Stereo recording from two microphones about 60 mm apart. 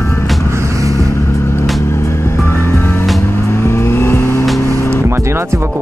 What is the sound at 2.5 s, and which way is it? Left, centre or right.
Music, left.